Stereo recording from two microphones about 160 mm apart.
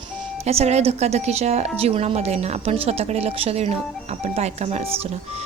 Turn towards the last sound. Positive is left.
turn(degrees=-40)  # may be behind; listen again after turning